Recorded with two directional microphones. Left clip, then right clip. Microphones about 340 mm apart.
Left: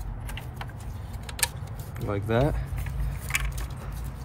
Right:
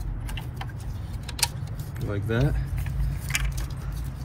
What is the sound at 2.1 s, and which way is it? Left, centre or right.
Speech, left.